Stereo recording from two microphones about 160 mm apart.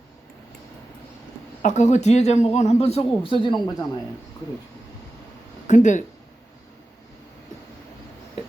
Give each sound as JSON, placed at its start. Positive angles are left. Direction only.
{"t": 1.6, "sound": "speech", "side_deg": 45}
{"t": 3.2, "sound": "speech", "side_deg": 30}
{"t": 5.6, "sound": "speech", "side_deg": 50}